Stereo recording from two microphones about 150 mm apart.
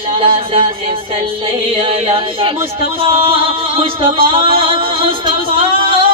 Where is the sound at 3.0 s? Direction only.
35° right (ahead or behind).